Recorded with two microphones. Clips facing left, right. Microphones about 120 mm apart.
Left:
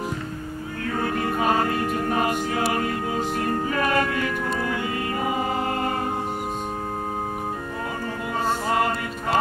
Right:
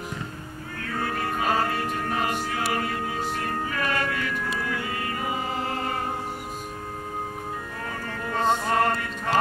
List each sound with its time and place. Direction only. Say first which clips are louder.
2.0 s music: left 4 dB; 35° left (ahead or behind)
8.6 s music: even; 5° left (ahead or behind)